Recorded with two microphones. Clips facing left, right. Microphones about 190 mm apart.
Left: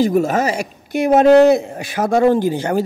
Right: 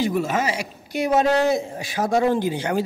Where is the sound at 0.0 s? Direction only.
45° left (ahead or behind).